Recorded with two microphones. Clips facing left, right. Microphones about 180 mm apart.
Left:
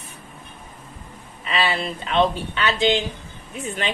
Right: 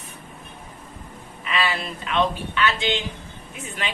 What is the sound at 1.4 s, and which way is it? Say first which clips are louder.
Speech: left 2 dB; 30° left (ahead or behind).